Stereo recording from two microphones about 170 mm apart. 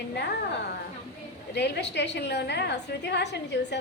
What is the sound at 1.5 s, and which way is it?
A woman's voice, 80° left.